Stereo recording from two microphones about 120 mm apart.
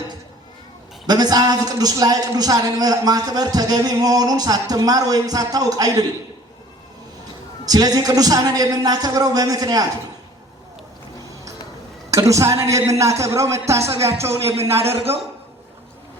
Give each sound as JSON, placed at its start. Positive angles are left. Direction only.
{"t": 1.0, "sound": "a man's voice", "side_deg": -35}
{"t": 7.6, "sound": "a man's voice", "side_deg": -30}
{"t": 12.1, "sound": "a man's voice", "side_deg": -25}
{"t": 14.9, "sound": "a man's voice", "side_deg": -55}